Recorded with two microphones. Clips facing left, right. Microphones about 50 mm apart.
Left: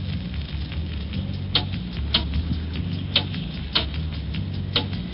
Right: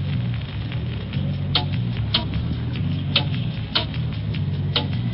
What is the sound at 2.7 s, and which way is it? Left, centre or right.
Vehicle, centre.